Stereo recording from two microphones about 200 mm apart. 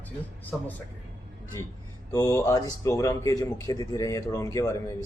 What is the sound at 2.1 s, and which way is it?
A man's voice, 15° left (ahead or behind).